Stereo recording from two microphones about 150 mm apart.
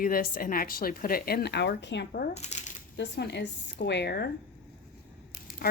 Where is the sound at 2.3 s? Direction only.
50° left (ahead or behind).